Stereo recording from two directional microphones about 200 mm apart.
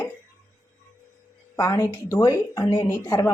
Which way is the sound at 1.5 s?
15° left (ahead or behind).